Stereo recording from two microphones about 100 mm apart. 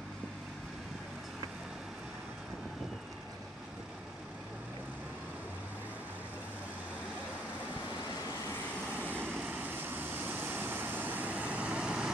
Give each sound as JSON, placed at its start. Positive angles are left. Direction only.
{"t": 8.9, "sound": "vehicle", "side_deg": -20}